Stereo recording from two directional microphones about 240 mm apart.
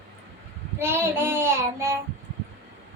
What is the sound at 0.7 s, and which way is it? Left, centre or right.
Child singing, centre.